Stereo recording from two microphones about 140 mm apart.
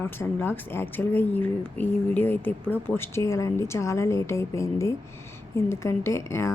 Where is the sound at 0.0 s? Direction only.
15° left (ahead or behind).